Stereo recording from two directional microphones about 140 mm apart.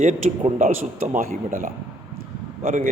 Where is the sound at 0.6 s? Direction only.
70° right (ahead or behind).